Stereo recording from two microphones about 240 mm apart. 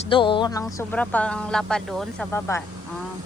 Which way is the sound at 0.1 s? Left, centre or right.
Centre.